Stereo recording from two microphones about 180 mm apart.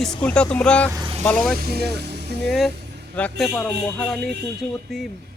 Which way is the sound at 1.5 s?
60° right (ahead or behind).